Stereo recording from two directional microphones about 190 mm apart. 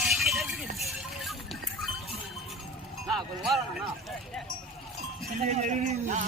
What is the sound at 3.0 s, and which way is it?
Speech, centre (ahead or behind).